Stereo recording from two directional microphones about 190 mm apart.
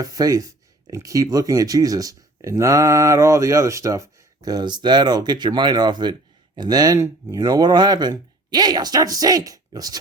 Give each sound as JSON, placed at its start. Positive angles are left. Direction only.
{"t": 0.0, "sound": "speech", "side_deg": -20}